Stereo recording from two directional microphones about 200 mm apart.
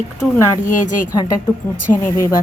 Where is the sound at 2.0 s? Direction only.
15° left (ahead or behind).